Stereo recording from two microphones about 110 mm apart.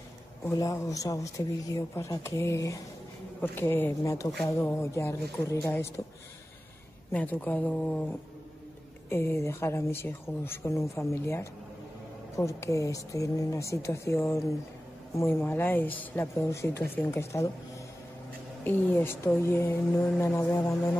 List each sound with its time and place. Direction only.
0.5 s speech: 30° left (ahead or behind)
7.1 s speech: 15° left (ahead or behind)
18.6 s speech: 20° left (ahead or behind)